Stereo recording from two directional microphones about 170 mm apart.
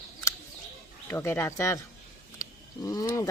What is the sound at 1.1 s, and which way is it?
Speech, 15° left (ahead or behind).